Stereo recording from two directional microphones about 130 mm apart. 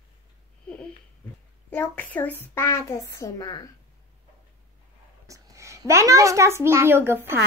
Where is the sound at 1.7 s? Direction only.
15° left (ahead or behind); by 3.7 s 30° left (ahead or behind).